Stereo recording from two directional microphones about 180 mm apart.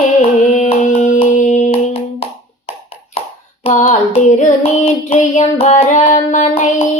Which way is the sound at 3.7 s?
40° left (ahead or behind).